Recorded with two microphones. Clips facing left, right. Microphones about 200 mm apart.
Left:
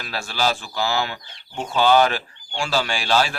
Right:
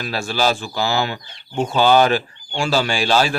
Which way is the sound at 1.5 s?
25° right (ahead or behind).